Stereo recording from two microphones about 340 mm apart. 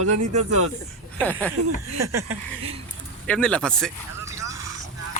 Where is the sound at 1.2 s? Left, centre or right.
Centre.